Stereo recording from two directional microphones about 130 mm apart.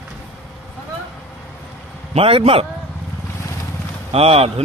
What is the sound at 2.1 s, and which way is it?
Speech, 50° right (ahead or behind).